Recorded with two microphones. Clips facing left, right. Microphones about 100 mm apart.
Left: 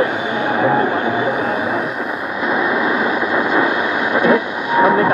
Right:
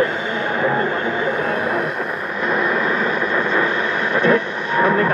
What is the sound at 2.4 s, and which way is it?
Vehicle, 5° left (ahead or behind).